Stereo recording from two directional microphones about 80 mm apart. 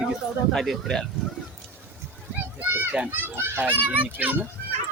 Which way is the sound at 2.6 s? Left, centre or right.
Right.